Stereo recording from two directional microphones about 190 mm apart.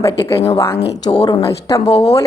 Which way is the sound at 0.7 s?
60° left (ahead or behind).